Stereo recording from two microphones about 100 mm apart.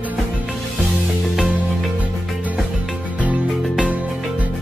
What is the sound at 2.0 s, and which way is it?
Music, 15° right (ahead or behind).